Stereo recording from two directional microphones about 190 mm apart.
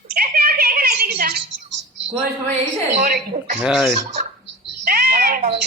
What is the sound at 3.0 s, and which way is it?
Speech, 40° right (ahead or behind).